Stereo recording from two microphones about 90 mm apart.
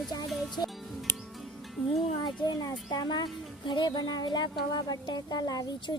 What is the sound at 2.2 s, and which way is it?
Speech, 45° left (ahead or behind).